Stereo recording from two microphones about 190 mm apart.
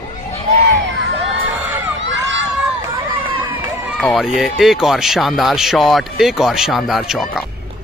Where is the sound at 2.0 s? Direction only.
70° right (ahead or behind).